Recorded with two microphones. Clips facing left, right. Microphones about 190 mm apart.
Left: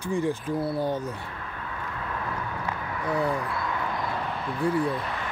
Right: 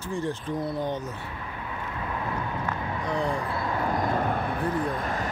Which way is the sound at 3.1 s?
5° left (ahead or behind).